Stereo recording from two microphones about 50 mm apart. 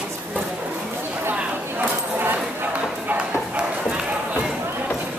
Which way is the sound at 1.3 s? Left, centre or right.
Right.